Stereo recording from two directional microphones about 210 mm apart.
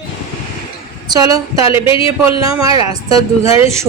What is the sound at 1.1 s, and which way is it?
Speech, 15° right (ahead or behind).